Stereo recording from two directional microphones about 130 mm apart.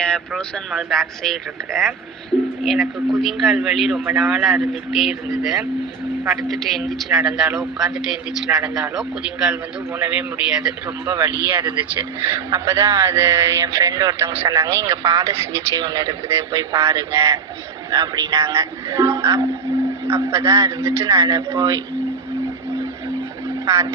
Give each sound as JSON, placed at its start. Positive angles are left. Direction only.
{"t": 0.0, "sound": "speech", "side_deg": 5}
{"t": 3.1, "sound": "a man's voice", "side_deg": 0}
{"t": 12.5, "sound": "speech", "side_deg": -25}
{"t": 23.6, "sound": "speech", "side_deg": -25}